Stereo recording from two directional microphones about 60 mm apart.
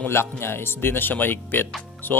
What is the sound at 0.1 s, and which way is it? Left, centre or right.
Speech, left.